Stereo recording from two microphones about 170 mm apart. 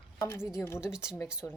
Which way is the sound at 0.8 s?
5° right (ahead or behind).